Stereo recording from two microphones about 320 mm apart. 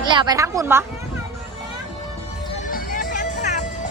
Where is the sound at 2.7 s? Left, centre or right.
Left.